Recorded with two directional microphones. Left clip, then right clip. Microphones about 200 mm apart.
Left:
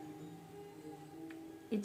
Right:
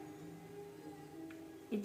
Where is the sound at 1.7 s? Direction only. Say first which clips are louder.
Left 2 dB; 60° left (ahead or behind).